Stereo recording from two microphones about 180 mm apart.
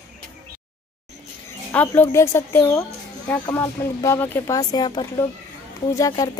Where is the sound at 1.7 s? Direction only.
10° left (ahead or behind).